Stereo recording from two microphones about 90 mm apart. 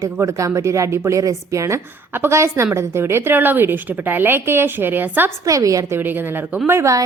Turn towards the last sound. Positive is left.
turn(degrees=-35)  # may be behind; listen again after turning